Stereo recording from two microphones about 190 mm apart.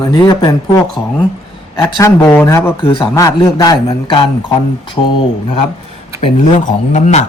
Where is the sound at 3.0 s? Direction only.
15° left (ahead or behind).